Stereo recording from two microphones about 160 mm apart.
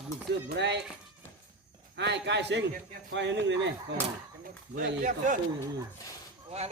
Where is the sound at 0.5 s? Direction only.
90° right.